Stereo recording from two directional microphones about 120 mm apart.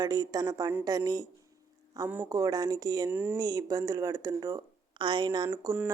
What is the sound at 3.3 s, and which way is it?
Speech, 30° right (ahead or behind).